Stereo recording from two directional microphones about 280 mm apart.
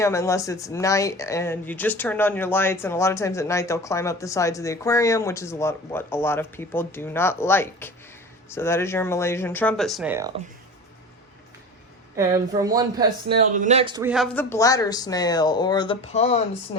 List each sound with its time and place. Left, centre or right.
0.0 s speech: centre
12.1 s speech: centre
14.1 s speech: centre; by 16.4 s left